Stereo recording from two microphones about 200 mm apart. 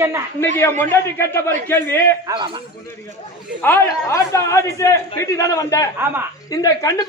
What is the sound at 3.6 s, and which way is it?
A man's voice, 10° left (ahead or behind).